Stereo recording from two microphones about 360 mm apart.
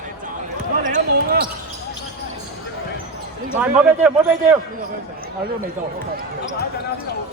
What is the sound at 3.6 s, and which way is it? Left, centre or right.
A man's voice, centre.